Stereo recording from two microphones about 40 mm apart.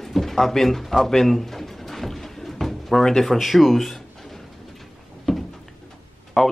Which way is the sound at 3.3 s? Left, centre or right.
Centre.